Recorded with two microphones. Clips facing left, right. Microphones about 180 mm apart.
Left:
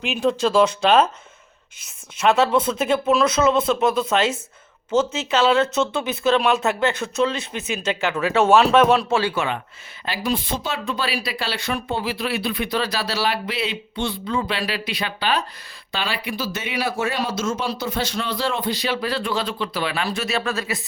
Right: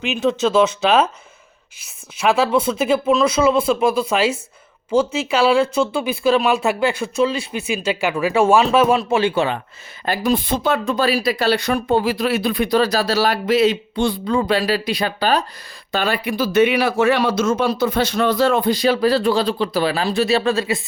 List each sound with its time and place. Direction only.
0.0 s speech: centre (ahead or behind)
2.1 s speech: 10° right (ahead or behind)
9.0 s speech: 15° right (ahead or behind)
9.3 s speech: 35° right (ahead or behind)
10.1 s speech: 50° right (ahead or behind); by 20.8 s 30° right (ahead or behind)